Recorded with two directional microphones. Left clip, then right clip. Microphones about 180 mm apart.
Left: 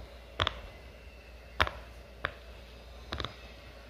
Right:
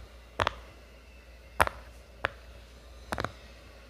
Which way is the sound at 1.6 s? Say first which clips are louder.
Right 4 dB; 20° right (ahead or behind).